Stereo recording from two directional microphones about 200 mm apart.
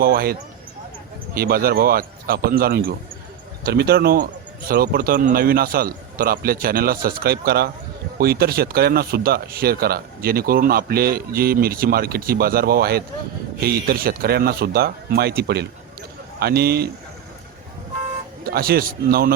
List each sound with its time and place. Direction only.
0.0 s speech: 50° right (ahead or behind)
1.4 s speech: 50° right (ahead or behind)
18.4 s speech: 50° right (ahead or behind)